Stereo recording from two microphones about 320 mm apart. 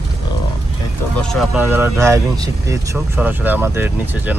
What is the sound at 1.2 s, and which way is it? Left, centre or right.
Speech, centre.